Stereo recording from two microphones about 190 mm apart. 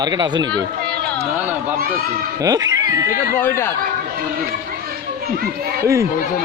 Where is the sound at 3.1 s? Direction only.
45° left (ahead or behind).